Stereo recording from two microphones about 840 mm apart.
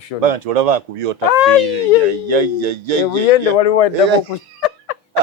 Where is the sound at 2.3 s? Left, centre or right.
Right.